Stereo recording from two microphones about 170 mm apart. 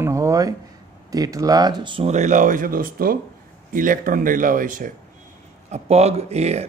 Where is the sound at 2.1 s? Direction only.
45° right (ahead or behind).